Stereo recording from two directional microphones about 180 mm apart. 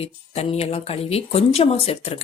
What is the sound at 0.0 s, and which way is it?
Speech, 35° left (ahead or behind).